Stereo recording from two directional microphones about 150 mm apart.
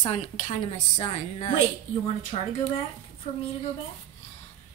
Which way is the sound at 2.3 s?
45° left (ahead or behind).